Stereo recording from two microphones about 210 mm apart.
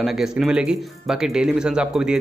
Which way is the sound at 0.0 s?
Centre (ahead or behind).